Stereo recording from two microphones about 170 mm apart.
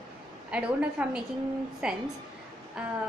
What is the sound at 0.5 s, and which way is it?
A woman's voice, 5° right (ahead or behind).